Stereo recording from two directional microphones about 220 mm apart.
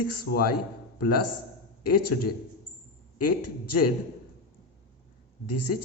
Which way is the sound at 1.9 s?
90° left.